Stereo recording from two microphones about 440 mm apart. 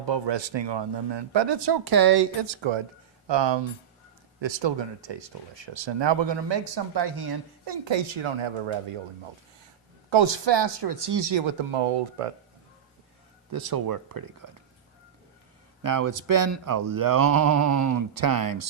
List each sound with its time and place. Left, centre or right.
0.0 s speech: right
3.2 s speech: right
4.4 s speech: right
10.1 s speech: right
13.5 s speech: right
15.8 s speech: right